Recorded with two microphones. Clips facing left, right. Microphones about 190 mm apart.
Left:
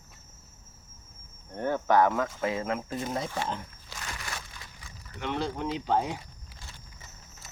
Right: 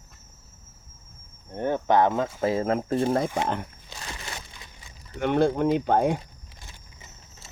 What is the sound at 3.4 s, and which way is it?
Speech, 65° right (ahead or behind).